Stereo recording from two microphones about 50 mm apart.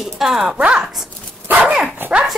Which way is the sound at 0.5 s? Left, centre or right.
Right.